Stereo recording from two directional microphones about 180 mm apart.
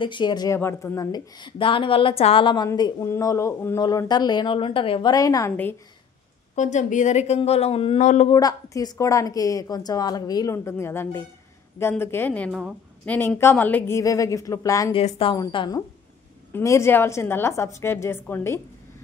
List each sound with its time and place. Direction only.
0.0 s a woman's voice: 25° left (ahead or behind)
6.5 s speech: 40° left (ahead or behind)
8.3 s a woman's voice: 20° left (ahead or behind)
14.9 s a woman's voice: 30° left (ahead or behind); by 18.6 s 15° left (ahead or behind)